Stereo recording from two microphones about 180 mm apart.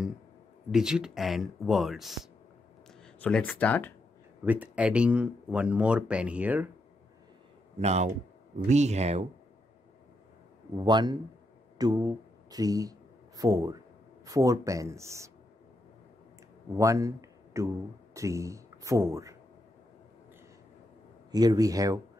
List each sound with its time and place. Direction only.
0.7 s speech: 5° right (ahead or behind)
4.5 s speech: 10° right (ahead or behind)
7.8 s speech: 35° right (ahead or behind)
10.8 s speech: 25° right (ahead or behind)
16.7 s speech: 15° right (ahead or behind)
21.3 s speech: 20° right (ahead or behind)